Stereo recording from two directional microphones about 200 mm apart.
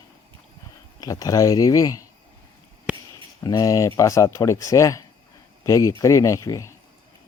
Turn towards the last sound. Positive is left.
turn(degrees=15)  # may be behind; listen again after turning